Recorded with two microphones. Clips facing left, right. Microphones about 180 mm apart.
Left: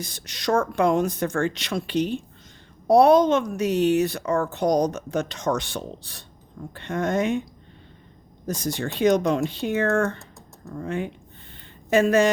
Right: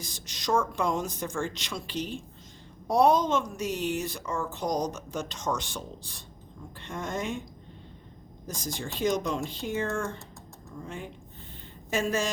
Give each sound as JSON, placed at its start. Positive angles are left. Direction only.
{"t": 0.0, "sound": "a woman's voice", "side_deg": 65}
{"t": 8.4, "sound": "a woman's voice", "side_deg": 65}
{"t": 11.5, "sound": "a sound", "side_deg": 65}